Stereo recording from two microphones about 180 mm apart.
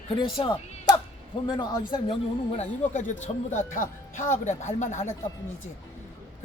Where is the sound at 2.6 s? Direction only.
40° left (ahead or behind).